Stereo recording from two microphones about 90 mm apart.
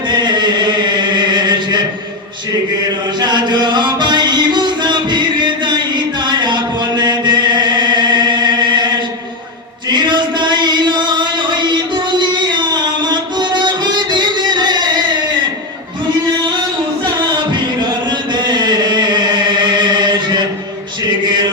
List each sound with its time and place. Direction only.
0.1 s chant: 55° right (ahead or behind)
3.2 s music: 55° right (ahead or behind)
9.9 s chant: 55° right (ahead or behind)
12.2 s music: 55° right (ahead or behind)
17.2 s a sound: 55° right (ahead or behind)